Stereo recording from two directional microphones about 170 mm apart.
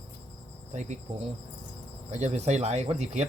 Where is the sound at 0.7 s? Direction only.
45° right (ahead or behind).